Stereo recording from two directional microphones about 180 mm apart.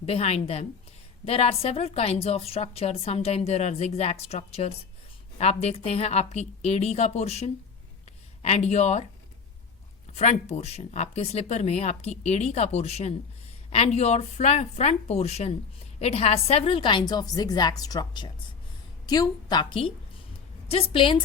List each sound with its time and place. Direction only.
0.0 s speech: 35° left (ahead or behind)
10.1 s a woman's voice: 35° left (ahead or behind)